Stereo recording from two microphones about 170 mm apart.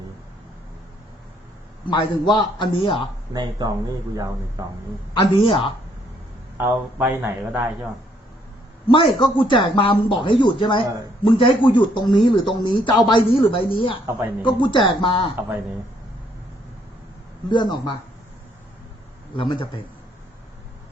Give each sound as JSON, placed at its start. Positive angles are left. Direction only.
{"t": 1.9, "sound": "speech", "side_deg": 25}
{"t": 3.3, "sound": "speech", "side_deg": -25}
{"t": 5.4, "sound": "a man's voice", "side_deg": 30}
{"t": 6.6, "sound": "speech", "side_deg": -15}
{"t": 8.9, "sound": "speech", "side_deg": 30}
{"t": 17.5, "sound": "speech", "side_deg": 25}
{"t": 19.4, "sound": "speech", "side_deg": 30}